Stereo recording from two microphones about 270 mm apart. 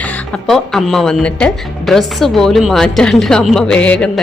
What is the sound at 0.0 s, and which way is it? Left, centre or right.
Speech, centre.